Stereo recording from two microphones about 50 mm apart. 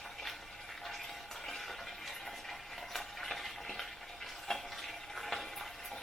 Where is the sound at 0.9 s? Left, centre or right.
Centre.